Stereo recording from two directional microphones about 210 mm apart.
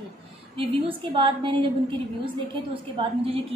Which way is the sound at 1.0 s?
25° right (ahead or behind).